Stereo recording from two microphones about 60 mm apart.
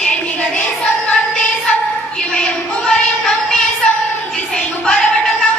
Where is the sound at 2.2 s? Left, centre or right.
Centre.